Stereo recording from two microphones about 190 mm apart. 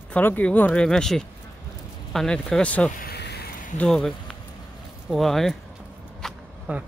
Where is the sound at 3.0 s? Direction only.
60° left (ahead or behind).